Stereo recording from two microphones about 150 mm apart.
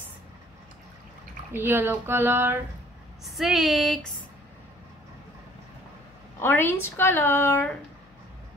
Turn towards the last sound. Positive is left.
turn(degrees=15)  # may be behind; listen again after turning